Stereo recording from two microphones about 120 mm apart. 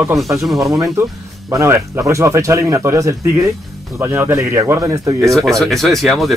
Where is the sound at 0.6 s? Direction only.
25° right (ahead or behind).